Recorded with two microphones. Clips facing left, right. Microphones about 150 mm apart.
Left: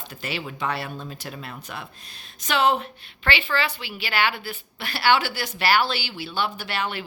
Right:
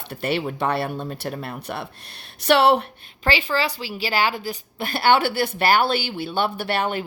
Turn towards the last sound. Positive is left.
turn(degrees=-50)  # may be behind; listen again after turning